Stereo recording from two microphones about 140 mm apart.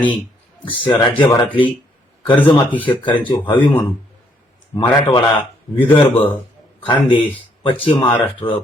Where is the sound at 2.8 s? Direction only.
35° left (ahead or behind).